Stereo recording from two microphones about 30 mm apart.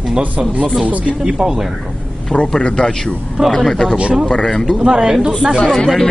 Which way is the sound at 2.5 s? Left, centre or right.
Left.